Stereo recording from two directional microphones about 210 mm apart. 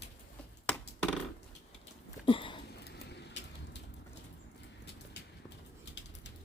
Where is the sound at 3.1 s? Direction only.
55° left (ahead or behind).